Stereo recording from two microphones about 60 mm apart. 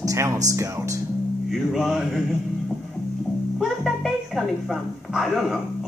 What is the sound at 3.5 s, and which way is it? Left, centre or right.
Speech, centre.